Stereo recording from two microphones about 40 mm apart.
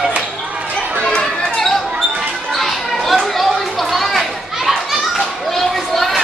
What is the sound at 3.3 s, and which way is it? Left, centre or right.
Children playing, centre.